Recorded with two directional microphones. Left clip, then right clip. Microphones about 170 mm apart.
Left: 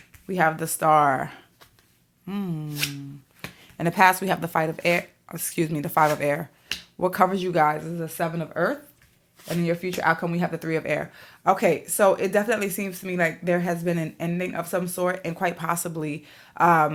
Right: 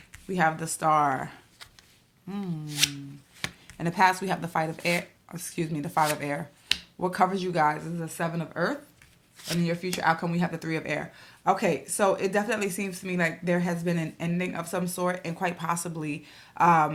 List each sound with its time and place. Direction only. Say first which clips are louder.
0.3 s speech: left 3 dB; 35° left (ahead or behind)
3.4 s chopping: right 5 dB; 25° right (ahead or behind)
3.8 s speech: left 4 dB; 40° left (ahead or behind)